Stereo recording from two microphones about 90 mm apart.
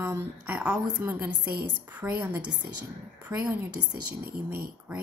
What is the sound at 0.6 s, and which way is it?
A woman's voice, 15° right (ahead or behind).